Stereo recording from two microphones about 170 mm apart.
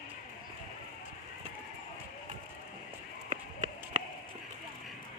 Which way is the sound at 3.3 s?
45° right (ahead or behind).